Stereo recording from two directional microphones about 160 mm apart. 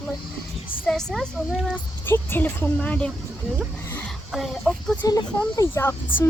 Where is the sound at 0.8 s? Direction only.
5° left (ahead or behind).